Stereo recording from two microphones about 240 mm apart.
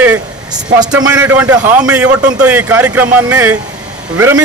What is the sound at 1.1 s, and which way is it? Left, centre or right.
A man's voice, centre.